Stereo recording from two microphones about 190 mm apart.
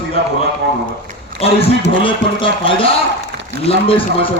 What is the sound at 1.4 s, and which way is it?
A man's voice, 30° left (ahead or behind).